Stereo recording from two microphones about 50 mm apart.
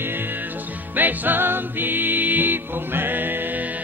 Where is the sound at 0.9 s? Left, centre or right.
Right.